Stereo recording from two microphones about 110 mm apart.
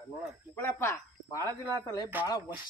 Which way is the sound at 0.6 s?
20° left (ahead or behind).